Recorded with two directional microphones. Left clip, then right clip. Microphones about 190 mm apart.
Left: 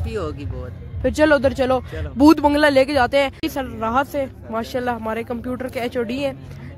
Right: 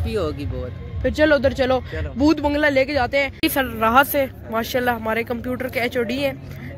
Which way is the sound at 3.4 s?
5° left (ahead or behind).